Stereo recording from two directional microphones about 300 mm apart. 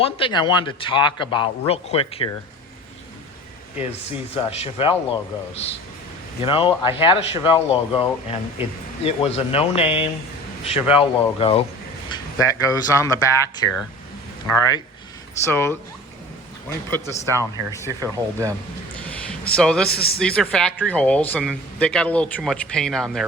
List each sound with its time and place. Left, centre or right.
0.0 s a man's voice: centre
4.4 s a man's voice: centre
14.5 s a man's voice: centre
17.2 s speech: centre
19.5 s speech: centre